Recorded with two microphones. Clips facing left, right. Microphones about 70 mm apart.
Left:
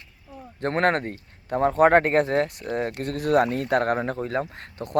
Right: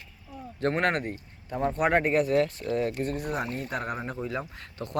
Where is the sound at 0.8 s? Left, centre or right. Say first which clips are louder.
Left 9 dB; left.